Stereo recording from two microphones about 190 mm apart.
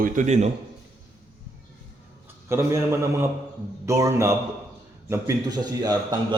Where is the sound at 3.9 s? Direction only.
15° right (ahead or behind).